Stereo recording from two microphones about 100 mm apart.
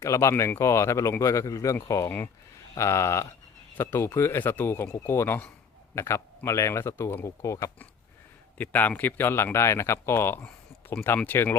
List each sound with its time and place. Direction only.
0.0 s speech: 30° left (ahead or behind)
2.0 s speech: 20° left (ahead or behind)
8.5 s speech: 20° left (ahead or behind)
10.4 s a sound: 10° left (ahead or behind)
11.3 s speech: 20° left (ahead or behind)